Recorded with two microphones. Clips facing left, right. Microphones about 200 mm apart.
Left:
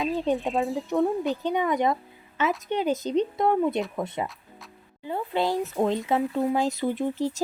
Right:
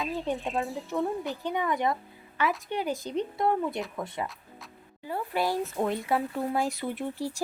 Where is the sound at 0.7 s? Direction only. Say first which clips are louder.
Left 6 dB; 15° left (ahead or behind).